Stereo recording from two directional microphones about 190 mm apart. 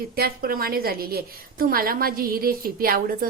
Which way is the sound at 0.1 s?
50° right (ahead or behind).